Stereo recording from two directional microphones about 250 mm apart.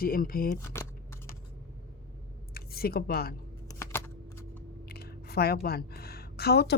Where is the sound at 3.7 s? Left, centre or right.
Centre.